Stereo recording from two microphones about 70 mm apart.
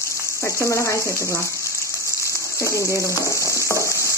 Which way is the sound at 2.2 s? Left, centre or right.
Left.